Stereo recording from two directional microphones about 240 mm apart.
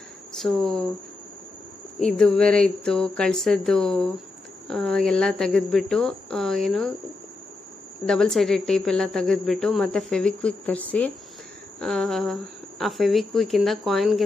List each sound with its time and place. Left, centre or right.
0.3 s speech: centre
2.0 s a woman's voice: centre
8.0 s a woman's voice: centre